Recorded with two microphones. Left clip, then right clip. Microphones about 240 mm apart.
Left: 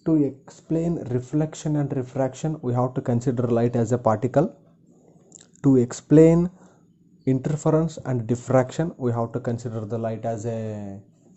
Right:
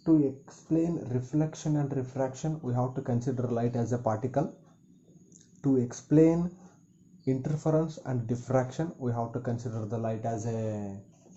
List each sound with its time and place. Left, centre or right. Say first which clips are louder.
0.0 s speech: left 3 dB; left
5.6 s speech: left 9 dB; left